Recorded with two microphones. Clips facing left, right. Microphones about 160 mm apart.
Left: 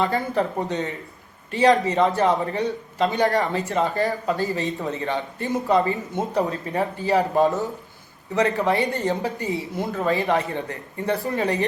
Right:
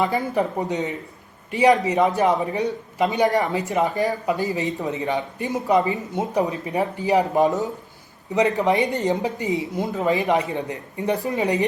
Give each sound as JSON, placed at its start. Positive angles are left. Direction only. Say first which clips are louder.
{"t": 0.0, "sound": "a man's voice", "louder": "right 1 dB", "side_deg": -15}